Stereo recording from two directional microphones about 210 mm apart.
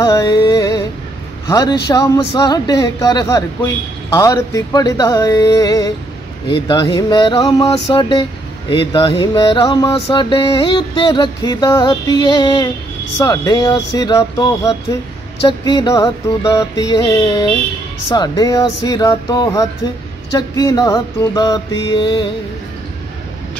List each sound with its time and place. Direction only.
0.0 s music: 15° left (ahead or behind)
1.5 s speech: 15° left (ahead or behind)
6.7 s a sound: 20° left (ahead or behind)